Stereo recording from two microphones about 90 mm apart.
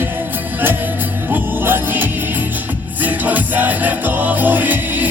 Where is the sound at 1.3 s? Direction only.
20° right (ahead or behind).